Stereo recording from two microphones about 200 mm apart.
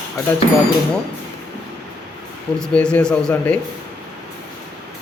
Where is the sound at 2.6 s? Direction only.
5° left (ahead or behind).